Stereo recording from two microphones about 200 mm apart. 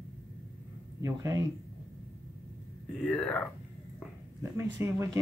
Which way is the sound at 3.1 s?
5° left (ahead or behind).